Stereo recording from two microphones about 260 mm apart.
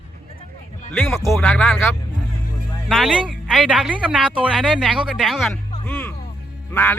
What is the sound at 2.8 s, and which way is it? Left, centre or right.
Speech, centre.